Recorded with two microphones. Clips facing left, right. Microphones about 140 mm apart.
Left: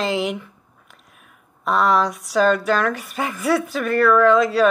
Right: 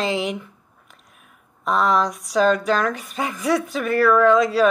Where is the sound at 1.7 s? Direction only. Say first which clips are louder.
Left 1 dB; centre (ahead or behind).